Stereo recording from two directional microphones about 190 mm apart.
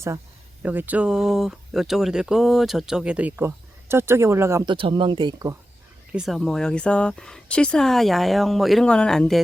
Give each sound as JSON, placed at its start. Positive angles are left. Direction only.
{"t": 0.6, "sound": "speech", "side_deg": -10}
{"t": 4.7, "sound": "speech", "side_deg": -25}
{"t": 6.1, "sound": "speech", "side_deg": -5}